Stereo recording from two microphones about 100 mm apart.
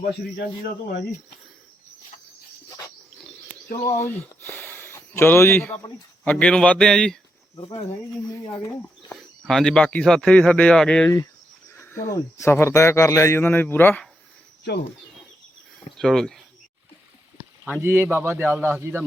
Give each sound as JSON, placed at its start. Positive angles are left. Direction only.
{"t": 3.8, "sound": "speech", "side_deg": 25}
{"t": 6.2, "sound": "a man's voice", "side_deg": 10}
{"t": 7.6, "sound": "speech", "side_deg": 60}
{"t": 9.1, "sound": "a man's voice", "side_deg": 5}
{"t": 11.7, "sound": "speech", "side_deg": 25}
{"t": 16.0, "sound": "speech", "side_deg": 5}
{"t": 17.7, "sound": "a man's voice", "side_deg": -20}